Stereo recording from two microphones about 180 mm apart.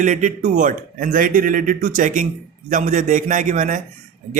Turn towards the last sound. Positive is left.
turn(degrees=-45)  # may be behind; listen again after turning